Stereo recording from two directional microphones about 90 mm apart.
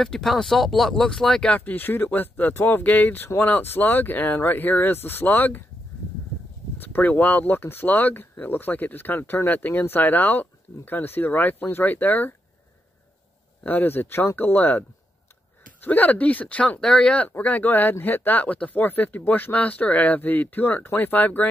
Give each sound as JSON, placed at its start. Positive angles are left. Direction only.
{"t": 0.0, "sound": "speech", "side_deg": 5}
{"t": 6.8, "sound": "speech", "side_deg": 20}
{"t": 13.7, "sound": "speech", "side_deg": 20}